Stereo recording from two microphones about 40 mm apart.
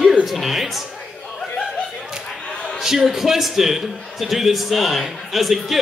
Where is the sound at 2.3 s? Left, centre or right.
Centre.